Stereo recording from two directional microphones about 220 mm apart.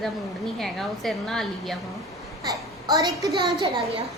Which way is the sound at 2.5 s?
15° right (ahead or behind).